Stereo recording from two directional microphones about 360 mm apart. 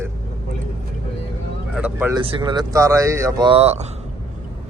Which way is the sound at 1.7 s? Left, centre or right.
Centre.